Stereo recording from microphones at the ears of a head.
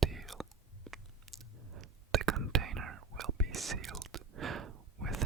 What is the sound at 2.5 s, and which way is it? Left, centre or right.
Whispering, right.